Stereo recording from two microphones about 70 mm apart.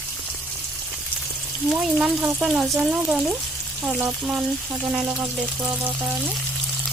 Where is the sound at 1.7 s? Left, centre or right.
Centre.